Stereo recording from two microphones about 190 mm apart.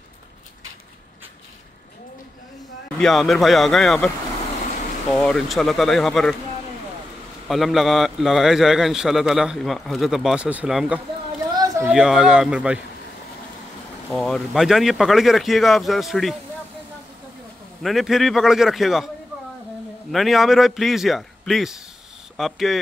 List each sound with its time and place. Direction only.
3.0 s a man's voice: centre (ahead or behind)
5.1 s a man's voice: centre (ahead or behind)
7.4 s a man's voice: centre (ahead or behind)
11.5 s a sound: 20° right (ahead or behind)
11.9 s a man's voice: centre (ahead or behind)
14.1 s a man's voice: centre (ahead or behind)
17.8 s a man's voice: centre (ahead or behind)
20.1 s a man's voice: centre (ahead or behind)